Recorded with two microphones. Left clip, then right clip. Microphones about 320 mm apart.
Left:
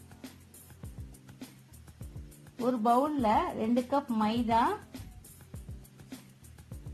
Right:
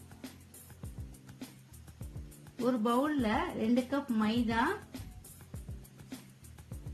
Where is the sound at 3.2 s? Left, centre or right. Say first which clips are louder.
Left 5 dB; centre.